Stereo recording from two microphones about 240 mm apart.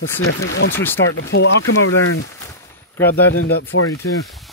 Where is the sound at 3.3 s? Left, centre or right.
Left.